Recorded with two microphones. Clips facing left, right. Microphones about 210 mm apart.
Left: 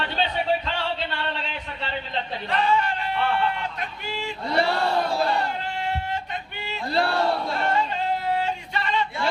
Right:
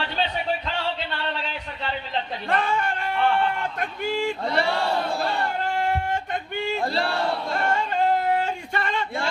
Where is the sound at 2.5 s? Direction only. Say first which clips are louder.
Left 2 dB; 50° right (ahead or behind).